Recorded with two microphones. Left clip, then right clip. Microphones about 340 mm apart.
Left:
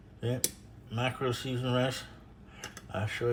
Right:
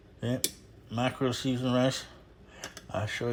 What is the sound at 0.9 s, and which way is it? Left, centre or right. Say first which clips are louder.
Speech: right 2 dB; centre.